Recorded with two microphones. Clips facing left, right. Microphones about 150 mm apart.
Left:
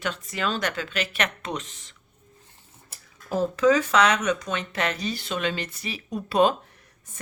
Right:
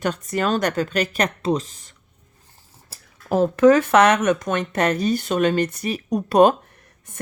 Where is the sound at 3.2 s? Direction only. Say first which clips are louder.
Right 6 dB; 60° right (ahead or behind).